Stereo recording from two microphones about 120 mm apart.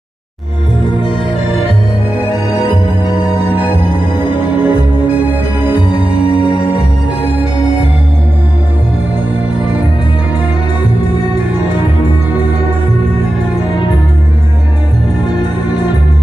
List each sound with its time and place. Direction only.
3.5 s music: 15° right (ahead or behind)